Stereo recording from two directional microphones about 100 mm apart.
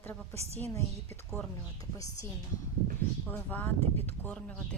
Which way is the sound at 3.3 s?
20° left (ahead or behind).